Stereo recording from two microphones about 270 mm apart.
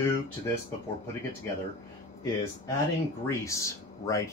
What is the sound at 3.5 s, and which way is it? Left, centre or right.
Speech, centre.